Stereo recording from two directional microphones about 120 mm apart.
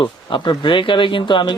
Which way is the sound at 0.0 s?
40° left (ahead or behind).